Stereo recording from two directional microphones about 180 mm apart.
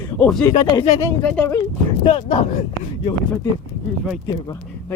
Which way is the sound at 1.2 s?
10° left (ahead or behind).